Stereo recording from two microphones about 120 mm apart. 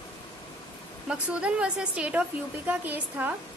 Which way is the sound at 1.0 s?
10° right (ahead or behind).